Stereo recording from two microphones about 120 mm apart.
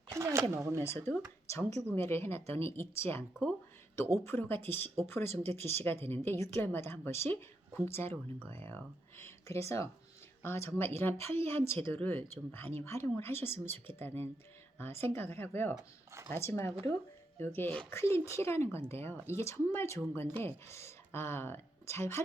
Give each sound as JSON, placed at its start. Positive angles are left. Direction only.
{"t": 0.1, "sound": "a sound", "side_deg": -25}
{"t": 0.5, "sound": "speech", "side_deg": -25}
{"t": 0.9, "sound": "a woman's voice", "side_deg": 20}
{"t": 5.3, "sound": "speech", "side_deg": -60}
{"t": 5.5, "sound": "a woman's voice", "side_deg": 20}